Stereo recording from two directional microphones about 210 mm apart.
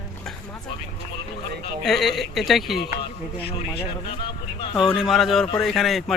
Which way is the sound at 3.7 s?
25° left (ahead or behind).